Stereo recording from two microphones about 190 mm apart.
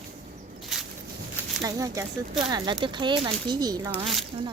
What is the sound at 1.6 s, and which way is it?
Speech, 20° right (ahead or behind).